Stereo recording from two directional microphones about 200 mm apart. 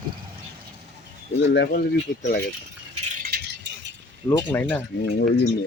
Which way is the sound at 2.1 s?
40° left (ahead or behind).